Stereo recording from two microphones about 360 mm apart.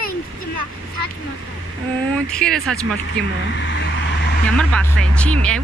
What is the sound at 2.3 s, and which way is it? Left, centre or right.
Speech, centre.